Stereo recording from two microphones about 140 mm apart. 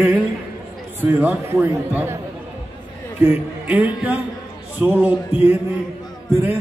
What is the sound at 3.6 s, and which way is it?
Speech, 10° right (ahead or behind).